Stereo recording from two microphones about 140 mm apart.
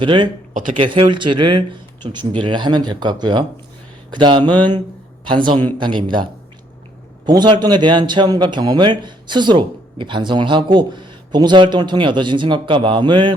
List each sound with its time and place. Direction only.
0.0 s a man's voice: 35° right (ahead or behind)
0.5 s speech: 65° right (ahead or behind)
0.8 s a man's voice: 35° right (ahead or behind)
7.3 s a man's voice: 30° right (ahead or behind)